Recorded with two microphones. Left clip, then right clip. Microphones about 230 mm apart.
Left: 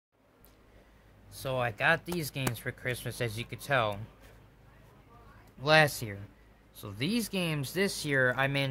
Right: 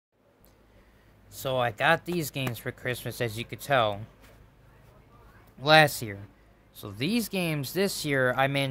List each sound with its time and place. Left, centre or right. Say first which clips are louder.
1.3 s speech: right 5 dB; centre
5.6 s speech: right 4 dB; centre